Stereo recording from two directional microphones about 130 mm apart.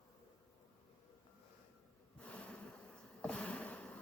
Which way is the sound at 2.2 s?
10° left (ahead or behind).